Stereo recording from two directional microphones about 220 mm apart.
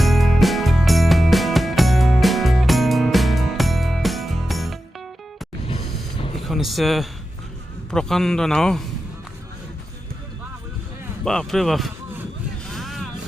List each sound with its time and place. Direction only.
0.0 s music: centre (ahead or behind)
5.7 s a sound: 25° left (ahead or behind)
6.4 s a sound: centre (ahead or behind)
7.9 s a man's voice: 5° left (ahead or behind)
11.3 s speech: centre (ahead or behind)
12.7 s vehicle: centre (ahead or behind)